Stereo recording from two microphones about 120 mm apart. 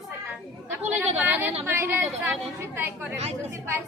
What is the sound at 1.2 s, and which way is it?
A woman's voice, 15° right (ahead or behind).